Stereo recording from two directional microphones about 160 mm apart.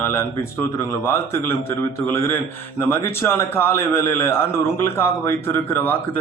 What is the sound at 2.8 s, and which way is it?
A man's voice, 15° left (ahead or behind).